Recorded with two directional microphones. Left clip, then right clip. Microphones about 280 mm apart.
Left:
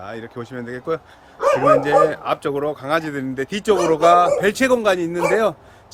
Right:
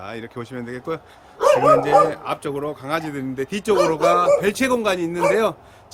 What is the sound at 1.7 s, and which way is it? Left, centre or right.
Speech, centre.